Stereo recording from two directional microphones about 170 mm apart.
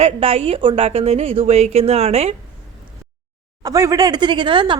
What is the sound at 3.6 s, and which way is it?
Speech, 20° right (ahead or behind).